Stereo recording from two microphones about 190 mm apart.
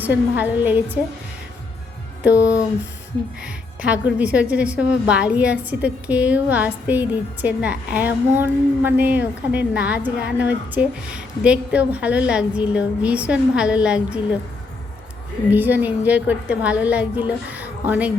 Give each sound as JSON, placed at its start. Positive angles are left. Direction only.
{"t": 0.0, "sound": "a woman's voice", "side_deg": -10}
{"t": 2.4, "sound": "a sound", "side_deg": 15}
{"t": 3.4, "sound": "a woman's voice", "side_deg": -5}
{"t": 15.4, "sound": "a woman's voice", "side_deg": -10}